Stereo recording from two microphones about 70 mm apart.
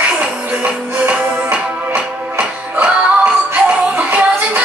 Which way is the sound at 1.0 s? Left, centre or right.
Centre.